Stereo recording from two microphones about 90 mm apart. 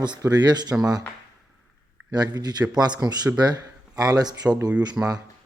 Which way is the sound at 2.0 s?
45° right (ahead or behind).